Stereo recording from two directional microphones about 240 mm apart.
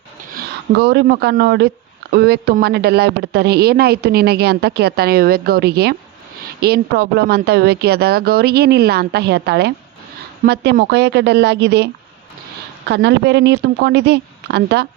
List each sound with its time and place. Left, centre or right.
0.3 s speech: right
12.9 s speech: right